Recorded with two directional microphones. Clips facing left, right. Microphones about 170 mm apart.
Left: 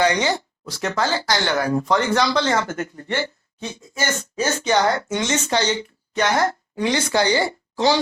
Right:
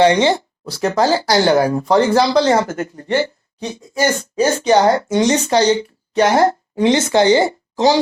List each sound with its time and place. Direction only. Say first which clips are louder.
0.0 s speech: right 7 dB; 30° right (ahead or behind)